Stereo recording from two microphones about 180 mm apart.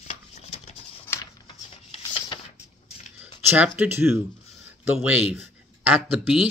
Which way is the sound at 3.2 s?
10° right (ahead or behind).